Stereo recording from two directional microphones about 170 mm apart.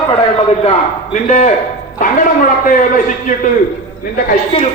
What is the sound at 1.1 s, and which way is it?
Speech, 45° left (ahead or behind).